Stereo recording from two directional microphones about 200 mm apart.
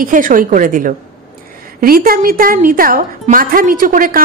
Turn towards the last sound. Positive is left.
turn(degrees=-45)  # may be behind; listen again after turning